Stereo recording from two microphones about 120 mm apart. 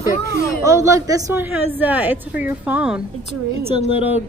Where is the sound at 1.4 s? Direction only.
15° right (ahead or behind).